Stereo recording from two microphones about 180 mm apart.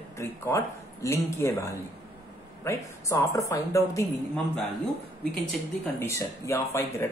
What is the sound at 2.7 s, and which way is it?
Speech, 15° left (ahead or behind).